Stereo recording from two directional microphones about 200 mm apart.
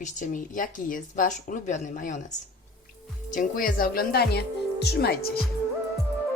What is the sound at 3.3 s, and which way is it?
A woman's voice, 40° left (ahead or behind).